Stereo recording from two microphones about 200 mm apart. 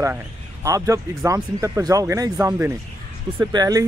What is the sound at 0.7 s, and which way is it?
Speech, 15° right (ahead or behind).